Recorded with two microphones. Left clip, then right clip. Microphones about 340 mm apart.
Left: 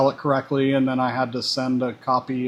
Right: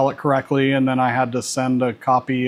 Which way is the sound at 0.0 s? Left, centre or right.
Right.